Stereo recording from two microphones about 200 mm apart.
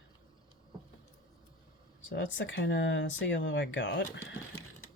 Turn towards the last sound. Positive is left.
turn(degrees=75)  # may be behind; listen again after turning